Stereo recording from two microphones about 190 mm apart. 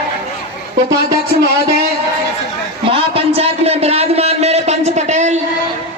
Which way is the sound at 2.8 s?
30° right (ahead or behind).